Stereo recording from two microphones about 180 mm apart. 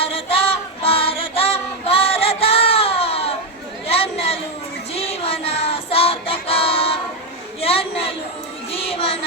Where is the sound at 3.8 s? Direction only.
35° left (ahead or behind).